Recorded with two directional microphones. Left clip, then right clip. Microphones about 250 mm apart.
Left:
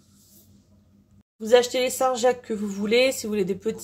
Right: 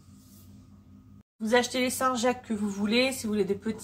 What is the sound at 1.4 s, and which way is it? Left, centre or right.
Speech, left.